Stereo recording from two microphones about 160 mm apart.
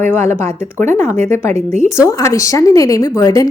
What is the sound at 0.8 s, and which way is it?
Speech, 50° right (ahead or behind).